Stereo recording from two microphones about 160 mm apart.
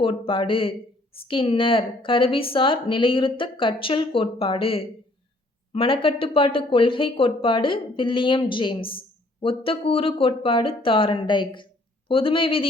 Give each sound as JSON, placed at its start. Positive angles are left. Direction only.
{"t": 0.0, "sound": "speech", "side_deg": 30}